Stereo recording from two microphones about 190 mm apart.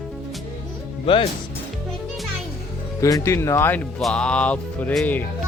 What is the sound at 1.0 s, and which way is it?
Speech, 30° left (ahead or behind).